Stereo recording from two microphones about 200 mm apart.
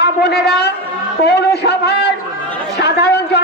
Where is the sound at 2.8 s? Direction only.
55° left (ahead or behind).